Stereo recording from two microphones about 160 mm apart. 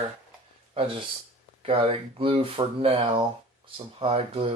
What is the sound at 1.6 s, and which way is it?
Speech, 35° right (ahead or behind).